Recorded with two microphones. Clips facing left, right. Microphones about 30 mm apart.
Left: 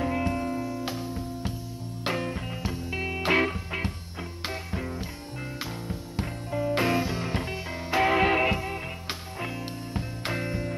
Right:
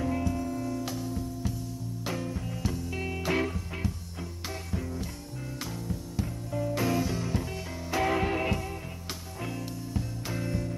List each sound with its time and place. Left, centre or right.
0.2 s music: left
0.6 s music: left
2.0 s music: left
2.6 s music: left
3.2 s music: left
9.9 s music: left